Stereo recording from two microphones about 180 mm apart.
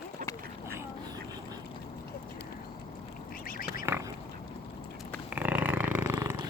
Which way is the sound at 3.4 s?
55° left (ahead or behind).